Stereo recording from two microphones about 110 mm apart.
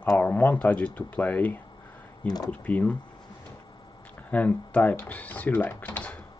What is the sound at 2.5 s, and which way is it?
Speech, 15° left (ahead or behind).